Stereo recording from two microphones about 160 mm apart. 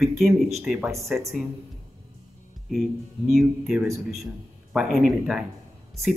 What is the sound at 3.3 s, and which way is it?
Speech, centre (ahead or behind).